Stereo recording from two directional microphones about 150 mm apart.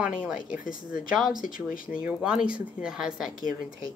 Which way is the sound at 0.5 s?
65° left (ahead or behind).